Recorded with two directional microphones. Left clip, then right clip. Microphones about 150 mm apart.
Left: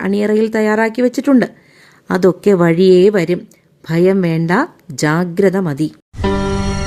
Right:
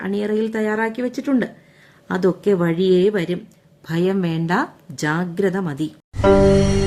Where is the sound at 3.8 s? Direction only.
30° left (ahead or behind).